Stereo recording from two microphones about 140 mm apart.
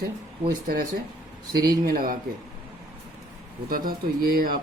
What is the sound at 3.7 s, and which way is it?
Speech, 90° right.